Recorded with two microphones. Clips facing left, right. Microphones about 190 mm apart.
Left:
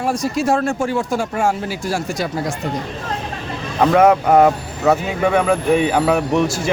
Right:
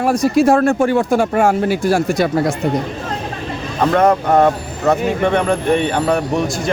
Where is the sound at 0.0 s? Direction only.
60° right (ahead or behind).